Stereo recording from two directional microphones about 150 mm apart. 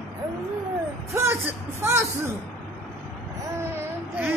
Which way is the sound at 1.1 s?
15° right (ahead or behind).